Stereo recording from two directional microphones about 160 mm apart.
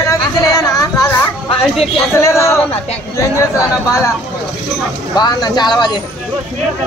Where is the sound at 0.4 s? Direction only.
20° left (ahead or behind).